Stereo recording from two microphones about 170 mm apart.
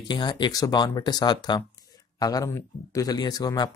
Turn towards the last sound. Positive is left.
turn(degrees=20)  # may be behind; listen again after turning